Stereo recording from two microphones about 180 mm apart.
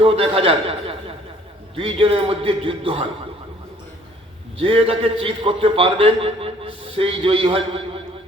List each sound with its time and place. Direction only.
0.0 s a man's voice: 30° right (ahead or behind)
4.5 s a man's voice: 30° right (ahead or behind)